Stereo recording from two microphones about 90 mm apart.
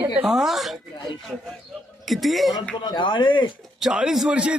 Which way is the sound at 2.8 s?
60° left (ahead or behind).